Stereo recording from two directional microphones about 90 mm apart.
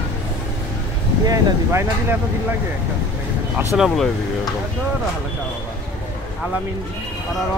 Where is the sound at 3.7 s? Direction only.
Centre (ahead or behind).